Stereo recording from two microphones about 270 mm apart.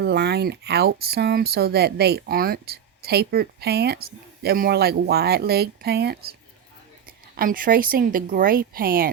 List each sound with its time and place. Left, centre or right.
0.0 s speech: right
7.3 s speech: right